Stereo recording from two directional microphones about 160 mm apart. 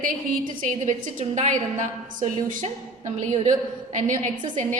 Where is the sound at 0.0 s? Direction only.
60° right (ahead or behind).